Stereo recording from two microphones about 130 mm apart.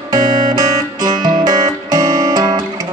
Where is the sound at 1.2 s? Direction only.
30° right (ahead or behind).